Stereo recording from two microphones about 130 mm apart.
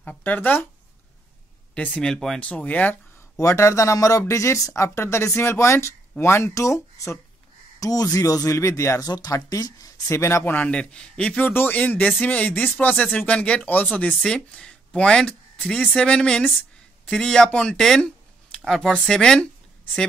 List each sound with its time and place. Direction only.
0.0 s speech: 15° left (ahead or behind)
2.0 s speech: 5° left (ahead or behind)
3.3 s speech: 20° left (ahead or behind); by 20.1 s 5° left (ahead or behind)